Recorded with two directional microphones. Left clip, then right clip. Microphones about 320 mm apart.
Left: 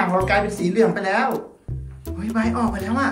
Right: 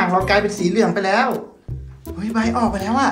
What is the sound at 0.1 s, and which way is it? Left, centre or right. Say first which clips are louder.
Speech: right 3 dB; centre.